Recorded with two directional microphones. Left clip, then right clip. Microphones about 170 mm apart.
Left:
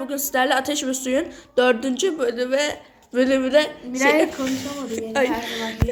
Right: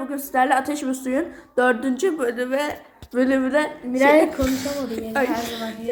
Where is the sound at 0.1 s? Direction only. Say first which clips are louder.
Right 1 dB; 15° left (ahead or behind).